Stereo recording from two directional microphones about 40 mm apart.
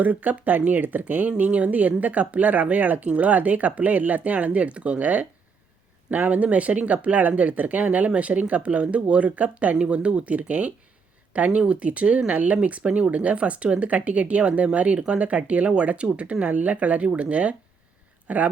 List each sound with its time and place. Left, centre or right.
0.0 s speech: right
1.4 s speech: right
9.7 s speech: right